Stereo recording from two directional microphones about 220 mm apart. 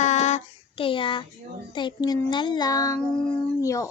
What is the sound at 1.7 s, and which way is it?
Child singing, 20° left (ahead or behind).